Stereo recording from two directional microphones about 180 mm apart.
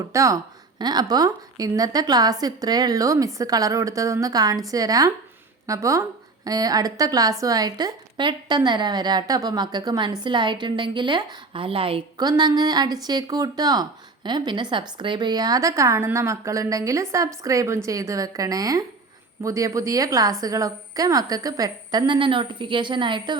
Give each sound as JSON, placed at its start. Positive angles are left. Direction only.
{"t": 0.0, "sound": "a woman's voice", "side_deg": -15}